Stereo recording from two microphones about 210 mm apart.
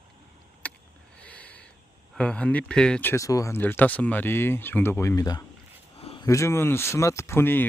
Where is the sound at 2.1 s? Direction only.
5° left (ahead or behind).